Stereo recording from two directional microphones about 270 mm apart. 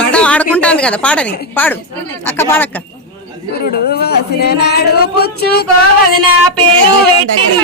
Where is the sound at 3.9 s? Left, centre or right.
Left.